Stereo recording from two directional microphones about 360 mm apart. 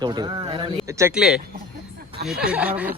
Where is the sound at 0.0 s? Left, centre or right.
Centre.